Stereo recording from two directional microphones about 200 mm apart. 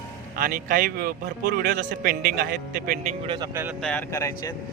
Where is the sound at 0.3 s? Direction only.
45° right (ahead or behind).